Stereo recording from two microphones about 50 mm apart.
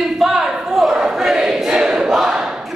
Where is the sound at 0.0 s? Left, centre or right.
Centre.